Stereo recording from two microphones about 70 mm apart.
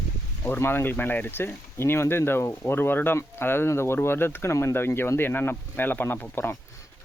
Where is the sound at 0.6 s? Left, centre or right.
Left.